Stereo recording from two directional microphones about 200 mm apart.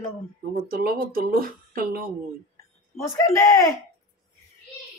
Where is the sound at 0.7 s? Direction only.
50° right (ahead or behind).